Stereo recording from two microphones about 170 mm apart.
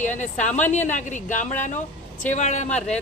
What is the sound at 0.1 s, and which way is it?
Speech, 45° left (ahead or behind).